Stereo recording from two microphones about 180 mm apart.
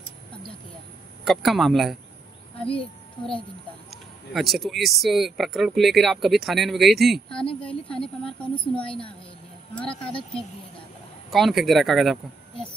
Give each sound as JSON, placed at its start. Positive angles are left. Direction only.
{"t": 1.2, "sound": "speech", "side_deg": 0}
{"t": 2.6, "sound": "a child's voice", "side_deg": 30}
{"t": 4.3, "sound": "speech", "side_deg": 0}
{"t": 7.6, "sound": "a sound", "side_deg": 5}
{"t": 8.8, "sound": "a woman's voice", "side_deg": 30}
{"t": 11.2, "sound": "speech", "side_deg": 0}